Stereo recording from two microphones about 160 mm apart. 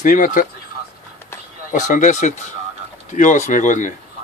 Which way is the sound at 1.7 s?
50° left (ahead or behind).